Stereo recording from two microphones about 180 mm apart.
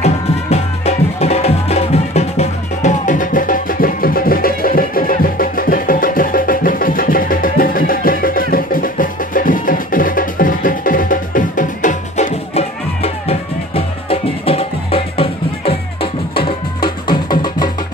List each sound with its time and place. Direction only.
0.0 s music: 35° left (ahead or behind)